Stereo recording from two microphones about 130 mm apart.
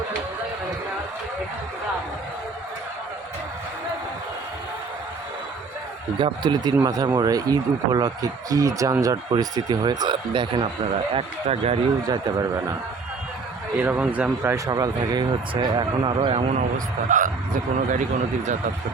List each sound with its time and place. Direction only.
6.1 s a man's voice: 40° right (ahead or behind)
11.1 s speech: 50° right (ahead or behind)
12.0 s a man's voice: 30° right (ahead or behind)
13.7 s speech: 15° right (ahead or behind)
14.5 s a man's voice: 30° right (ahead or behind); by 16.6 s 45° right (ahead or behind)
16.7 s speech: 80° right